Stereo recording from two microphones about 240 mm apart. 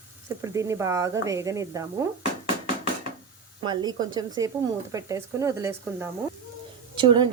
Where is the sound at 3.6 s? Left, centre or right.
Centre.